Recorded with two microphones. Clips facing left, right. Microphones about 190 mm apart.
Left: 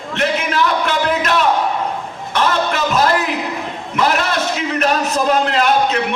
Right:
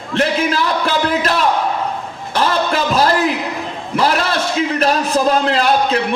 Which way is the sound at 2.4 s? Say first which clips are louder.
Right 1 dB; 35° right (ahead or behind).